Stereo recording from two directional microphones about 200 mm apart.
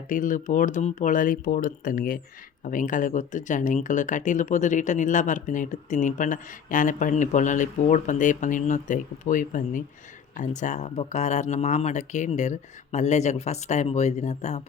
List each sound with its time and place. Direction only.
0.1 s speech: 40° left (ahead or behind)